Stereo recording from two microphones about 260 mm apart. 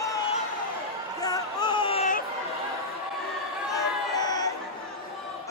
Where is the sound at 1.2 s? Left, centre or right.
Centre.